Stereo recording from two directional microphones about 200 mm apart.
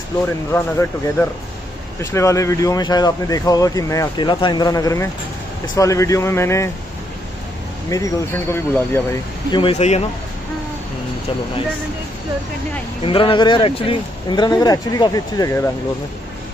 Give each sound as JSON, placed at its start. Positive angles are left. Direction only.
{"t": 0.5, "sound": "speech", "side_deg": 10}
{"t": 2.0, "sound": "speech", "side_deg": 15}
{"t": 7.9, "sound": "speech", "side_deg": 15}
{"t": 9.5, "sound": "speech", "side_deg": 25}
{"t": 13.0, "sound": "speech", "side_deg": 25}